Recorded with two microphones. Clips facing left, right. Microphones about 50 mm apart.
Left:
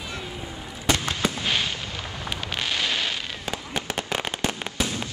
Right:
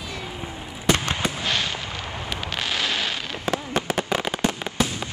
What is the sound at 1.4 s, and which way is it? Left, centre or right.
Fireworks, centre.